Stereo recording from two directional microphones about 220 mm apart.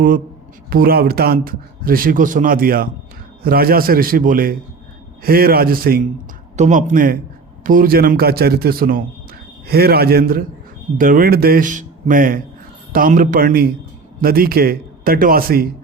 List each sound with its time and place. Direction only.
0.7 s a man's voice: 40° right (ahead or behind)